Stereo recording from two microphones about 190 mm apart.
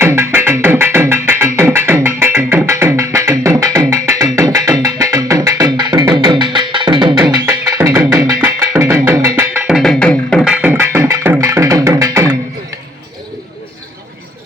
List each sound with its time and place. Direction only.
0.0 s music: 10° right (ahead or behind); by 10.5 s 5° left (ahead or behind)
10.5 s music: 10° right (ahead or behind)